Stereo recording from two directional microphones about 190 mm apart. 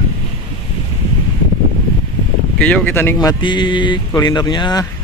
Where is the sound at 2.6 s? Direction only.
10° left (ahead or behind).